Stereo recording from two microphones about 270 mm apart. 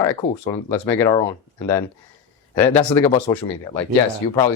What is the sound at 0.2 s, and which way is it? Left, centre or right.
Speech, centre.